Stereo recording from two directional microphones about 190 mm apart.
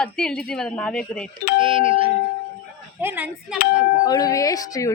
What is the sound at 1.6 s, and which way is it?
Speech, 30° right (ahead or behind).